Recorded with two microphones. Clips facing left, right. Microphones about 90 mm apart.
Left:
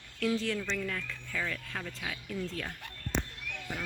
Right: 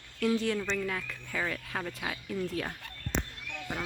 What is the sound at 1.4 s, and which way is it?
Speech, 25° right (ahead or behind).